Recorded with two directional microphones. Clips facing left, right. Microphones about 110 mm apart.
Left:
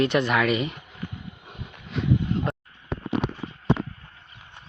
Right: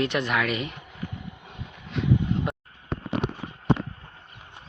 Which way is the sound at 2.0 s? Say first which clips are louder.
Even; centre (ahead or behind).